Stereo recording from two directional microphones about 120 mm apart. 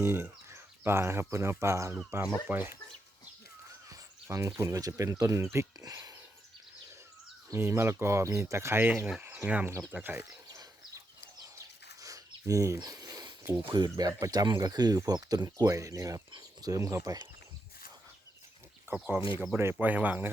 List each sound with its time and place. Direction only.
0.0 s speech: 20° right (ahead or behind)
3.7 s speech: 30° right (ahead or behind)
7.5 s speech: 20° right (ahead or behind)
10.5 s bird: 30° right (ahead or behind)
16.3 s speech: 30° right (ahead or behind)
18.9 s speech: 10° right (ahead or behind)